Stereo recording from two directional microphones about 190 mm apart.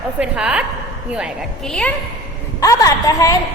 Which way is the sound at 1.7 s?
5° left (ahead or behind).